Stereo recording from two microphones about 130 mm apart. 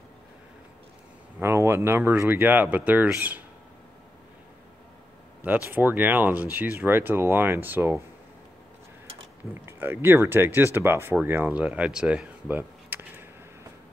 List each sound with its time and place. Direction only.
1.4 s speech: 20° right (ahead or behind)
5.4 s speech: 15° right (ahead or behind)
9.5 s speech: 15° right (ahead or behind)